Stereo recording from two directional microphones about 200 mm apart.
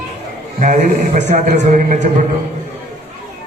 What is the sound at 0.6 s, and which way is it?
A man's voice, 40° right (ahead or behind).